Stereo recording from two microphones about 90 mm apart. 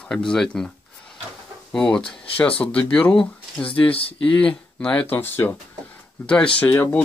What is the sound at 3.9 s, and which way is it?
Speech, 90° left.